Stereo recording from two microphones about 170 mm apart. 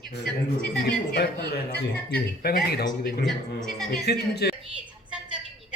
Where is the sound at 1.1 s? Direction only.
70° left (ahead or behind).